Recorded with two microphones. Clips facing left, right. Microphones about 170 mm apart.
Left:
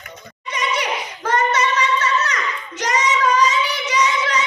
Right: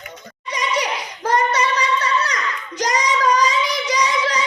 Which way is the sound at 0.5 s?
35° right (ahead or behind).